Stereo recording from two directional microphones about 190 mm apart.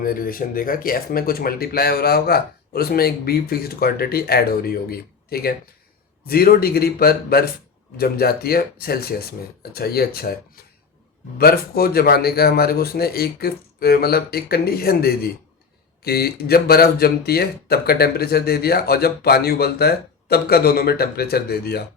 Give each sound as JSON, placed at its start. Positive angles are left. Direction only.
{"t": 0.0, "sound": "speech", "side_deg": 50}